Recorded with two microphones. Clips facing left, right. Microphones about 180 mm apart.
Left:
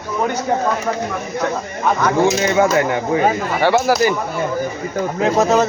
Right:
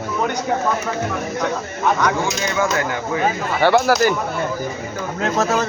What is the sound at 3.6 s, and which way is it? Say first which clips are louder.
Speech: even; 5° left (ahead or behind).